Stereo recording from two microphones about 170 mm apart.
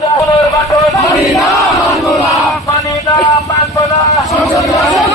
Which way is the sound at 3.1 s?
20° left (ahead or behind).